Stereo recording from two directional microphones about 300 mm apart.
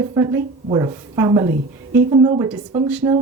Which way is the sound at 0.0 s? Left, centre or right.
Centre.